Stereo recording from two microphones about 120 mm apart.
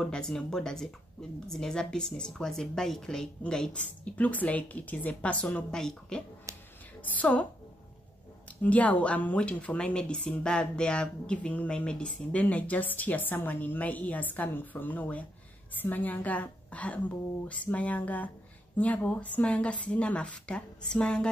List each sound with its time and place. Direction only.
0.0 s speech: 5° left (ahead or behind)
6.5 s a sound: 25° right (ahead or behind)
7.0 s a woman's voice: 15° left (ahead or behind)
8.6 s speech: 10° left (ahead or behind)